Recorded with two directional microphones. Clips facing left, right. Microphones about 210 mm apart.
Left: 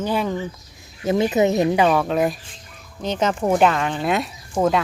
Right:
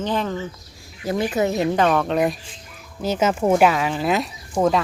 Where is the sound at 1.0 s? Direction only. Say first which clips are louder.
Left 3 dB; 20° left (ahead or behind).